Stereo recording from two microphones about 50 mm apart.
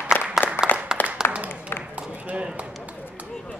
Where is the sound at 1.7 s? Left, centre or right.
Left.